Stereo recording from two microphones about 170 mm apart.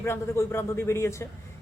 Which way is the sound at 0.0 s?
15° left (ahead or behind).